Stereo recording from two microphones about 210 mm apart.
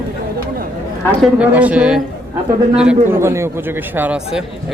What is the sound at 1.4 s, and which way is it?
A man's voice, 5° right (ahead or behind).